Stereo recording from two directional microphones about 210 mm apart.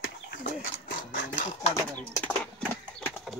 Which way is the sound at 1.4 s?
35° left (ahead or behind).